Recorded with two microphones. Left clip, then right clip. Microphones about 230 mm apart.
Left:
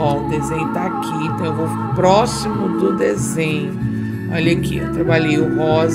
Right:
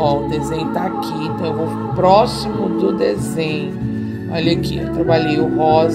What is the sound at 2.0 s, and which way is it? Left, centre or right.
Speech, left.